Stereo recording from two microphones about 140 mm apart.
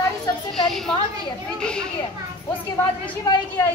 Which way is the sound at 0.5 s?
Centre (ahead or behind).